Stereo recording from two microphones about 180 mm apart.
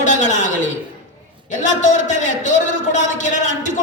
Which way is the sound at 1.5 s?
45° left (ahead or behind).